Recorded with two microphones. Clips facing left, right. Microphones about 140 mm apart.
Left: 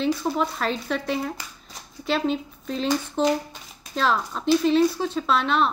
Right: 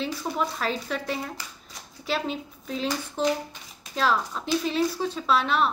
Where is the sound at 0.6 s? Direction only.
5° right (ahead or behind).